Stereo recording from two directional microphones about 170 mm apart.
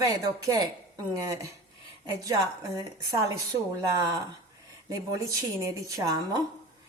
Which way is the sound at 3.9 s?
20° right (ahead or behind).